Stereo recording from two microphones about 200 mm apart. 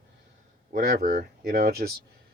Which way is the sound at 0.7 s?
50° right (ahead or behind).